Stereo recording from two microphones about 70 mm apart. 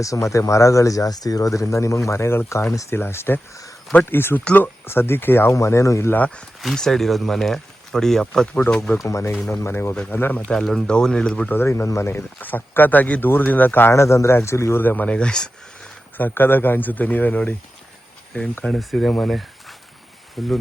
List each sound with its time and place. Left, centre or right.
0.0 s speech: left
5.5 s speech: left
6.1 s speech: left
6.6 s speech: centre
9.0 s speech: left
10.5 s speech: centre
11.4 s speech: left
12.4 s speech: left
13.9 s speech: left
14.8 s speech: left
16.1 s speech: left
18.7 s speech: centre
19.3 s a sound: centre
20.4 s speech: centre